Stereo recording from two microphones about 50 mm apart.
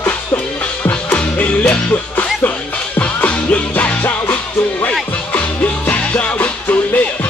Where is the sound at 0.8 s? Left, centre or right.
Left.